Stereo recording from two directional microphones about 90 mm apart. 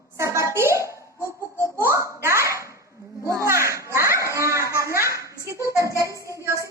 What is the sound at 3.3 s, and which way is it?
Children playing, 35° right (ahead or behind).